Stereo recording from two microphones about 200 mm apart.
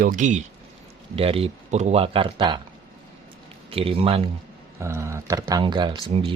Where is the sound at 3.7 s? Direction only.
30° right (ahead or behind).